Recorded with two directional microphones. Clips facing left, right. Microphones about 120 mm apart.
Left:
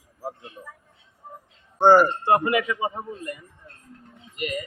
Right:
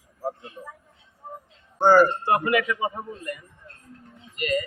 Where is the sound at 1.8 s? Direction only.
25° left (ahead or behind).